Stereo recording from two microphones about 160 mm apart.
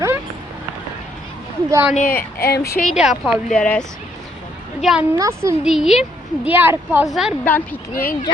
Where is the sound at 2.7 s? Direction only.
55° left (ahead or behind).